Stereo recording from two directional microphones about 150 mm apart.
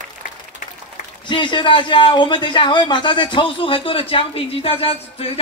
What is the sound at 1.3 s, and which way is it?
A man's voice, 30° left (ahead or behind).